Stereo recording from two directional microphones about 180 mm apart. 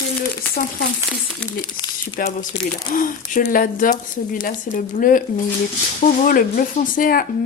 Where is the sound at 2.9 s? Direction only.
50° left (ahead or behind).